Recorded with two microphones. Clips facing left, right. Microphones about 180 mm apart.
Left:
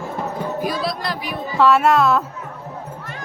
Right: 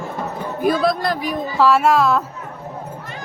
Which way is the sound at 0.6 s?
50° right (ahead or behind).